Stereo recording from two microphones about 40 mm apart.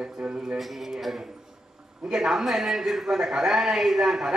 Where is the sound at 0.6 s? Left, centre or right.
Centre.